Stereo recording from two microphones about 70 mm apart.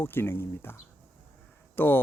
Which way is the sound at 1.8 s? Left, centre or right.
Left.